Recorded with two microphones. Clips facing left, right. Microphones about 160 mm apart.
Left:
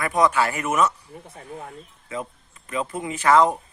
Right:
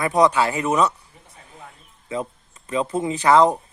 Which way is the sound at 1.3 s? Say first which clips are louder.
Left 7 dB; 40° left (ahead or behind).